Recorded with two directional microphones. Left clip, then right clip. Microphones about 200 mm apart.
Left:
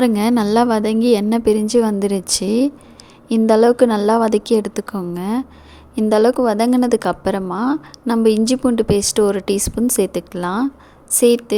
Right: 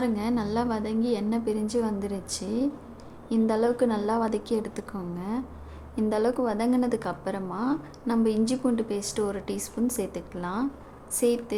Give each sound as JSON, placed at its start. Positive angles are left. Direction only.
{"t": 0.0, "sound": "a woman's voice", "side_deg": 45}